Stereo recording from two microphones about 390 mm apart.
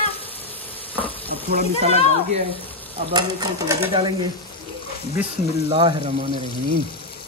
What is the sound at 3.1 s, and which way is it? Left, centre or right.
Speech, centre.